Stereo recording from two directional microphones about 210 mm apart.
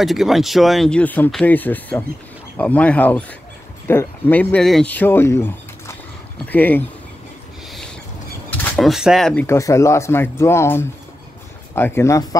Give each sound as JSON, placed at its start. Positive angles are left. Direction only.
{"t": 0.0, "sound": "speech", "side_deg": 0}
{"t": 8.5, "sound": "speech", "side_deg": 5}